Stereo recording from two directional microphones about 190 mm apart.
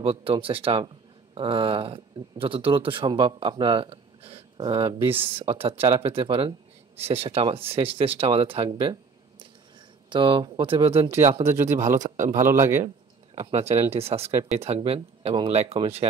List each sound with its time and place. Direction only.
0.0 s a man's voice: 30° right (ahead or behind)
10.0 s a man's voice: 25° right (ahead or behind)
11.7 s a man's voice: 15° right (ahead or behind)
12.0 s a man's voice: 40° right (ahead or behind)
12.4 s a man's voice: 15° right (ahead or behind)
12.8 s speech: 30° right (ahead or behind)